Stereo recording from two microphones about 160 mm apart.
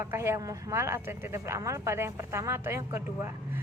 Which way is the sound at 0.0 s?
15° right (ahead or behind).